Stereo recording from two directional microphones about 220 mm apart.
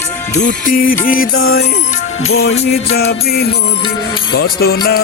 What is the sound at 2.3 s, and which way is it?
Music, 65° left (ahead or behind).